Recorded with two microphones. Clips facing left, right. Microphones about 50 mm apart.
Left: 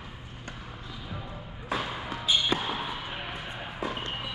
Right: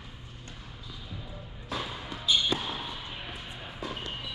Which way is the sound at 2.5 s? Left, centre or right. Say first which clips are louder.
Left 4 dB; left.